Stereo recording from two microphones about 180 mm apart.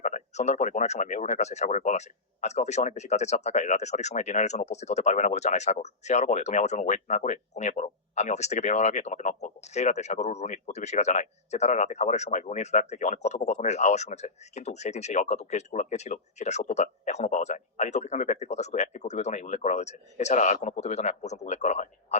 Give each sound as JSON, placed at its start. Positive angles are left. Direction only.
{"t": 0.0, "sound": "speech", "side_deg": 40}